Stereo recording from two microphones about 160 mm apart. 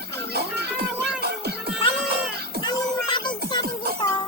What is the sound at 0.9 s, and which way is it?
Music, 10° right (ahead or behind).